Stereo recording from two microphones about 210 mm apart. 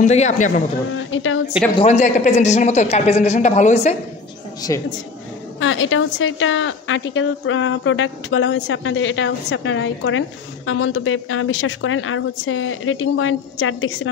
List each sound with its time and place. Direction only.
0.0 s speech: 35° left (ahead or behind)
0.9 s a woman's voice: 70° left (ahead or behind)
1.8 s speech: 30° left (ahead or behind)
4.6 s a woman's voice: 15° left (ahead or behind)
5.6 s a woman's voice: 70° left (ahead or behind)